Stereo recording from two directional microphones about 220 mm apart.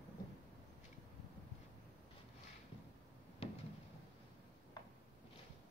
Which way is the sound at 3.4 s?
25° left (ahead or behind).